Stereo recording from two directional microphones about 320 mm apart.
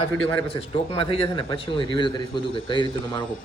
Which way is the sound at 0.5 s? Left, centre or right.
Centre.